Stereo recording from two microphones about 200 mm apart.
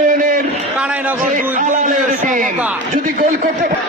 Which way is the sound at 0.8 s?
5° right (ahead or behind).